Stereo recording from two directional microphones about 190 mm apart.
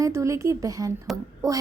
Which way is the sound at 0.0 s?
15° right (ahead or behind).